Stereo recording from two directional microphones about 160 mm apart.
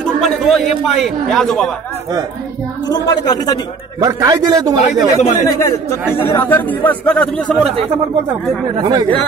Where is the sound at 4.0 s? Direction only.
20° right (ahead or behind).